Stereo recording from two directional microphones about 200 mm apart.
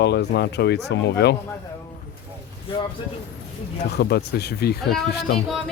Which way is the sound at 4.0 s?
55° left (ahead or behind).